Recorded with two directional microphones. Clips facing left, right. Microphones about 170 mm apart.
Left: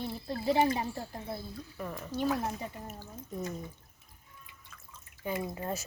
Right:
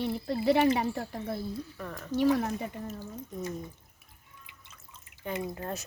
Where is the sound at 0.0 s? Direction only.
80° right.